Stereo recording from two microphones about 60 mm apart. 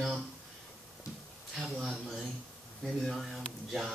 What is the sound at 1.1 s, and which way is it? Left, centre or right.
Speech, left.